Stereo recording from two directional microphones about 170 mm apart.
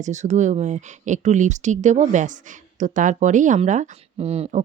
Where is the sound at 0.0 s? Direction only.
45° right (ahead or behind).